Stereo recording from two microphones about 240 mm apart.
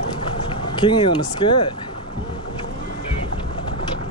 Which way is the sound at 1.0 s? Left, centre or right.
Centre.